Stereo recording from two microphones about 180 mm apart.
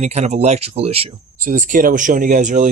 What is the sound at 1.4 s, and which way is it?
Speech, 45° right (ahead or behind).